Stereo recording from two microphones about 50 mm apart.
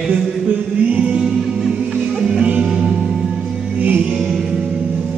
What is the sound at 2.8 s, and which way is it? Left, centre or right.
Music, centre.